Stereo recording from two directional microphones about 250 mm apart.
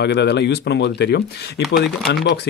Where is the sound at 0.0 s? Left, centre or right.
Left.